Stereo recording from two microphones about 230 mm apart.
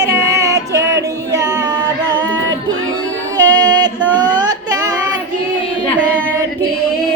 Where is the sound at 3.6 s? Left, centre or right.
Centre.